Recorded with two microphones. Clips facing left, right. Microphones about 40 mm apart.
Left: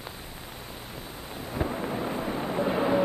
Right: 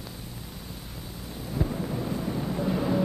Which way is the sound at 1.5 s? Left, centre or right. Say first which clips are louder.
Even; left.